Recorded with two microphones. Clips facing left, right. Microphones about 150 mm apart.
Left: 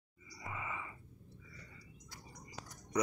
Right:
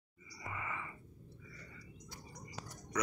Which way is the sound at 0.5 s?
15° left (ahead or behind).